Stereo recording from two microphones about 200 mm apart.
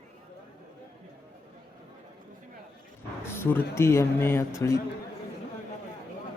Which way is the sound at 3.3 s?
10° left (ahead or behind).